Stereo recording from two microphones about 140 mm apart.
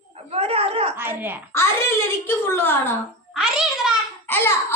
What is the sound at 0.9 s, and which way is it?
Speech, 15° right (ahead or behind).